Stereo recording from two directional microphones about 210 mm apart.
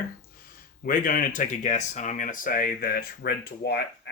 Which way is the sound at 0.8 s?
40° left (ahead or behind).